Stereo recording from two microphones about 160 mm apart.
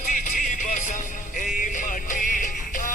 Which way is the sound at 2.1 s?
55° left (ahead or behind).